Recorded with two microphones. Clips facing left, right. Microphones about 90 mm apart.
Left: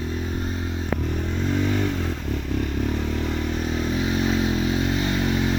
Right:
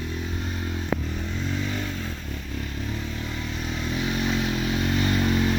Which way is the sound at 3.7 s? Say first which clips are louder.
Left 2 dB; 35° left (ahead or behind).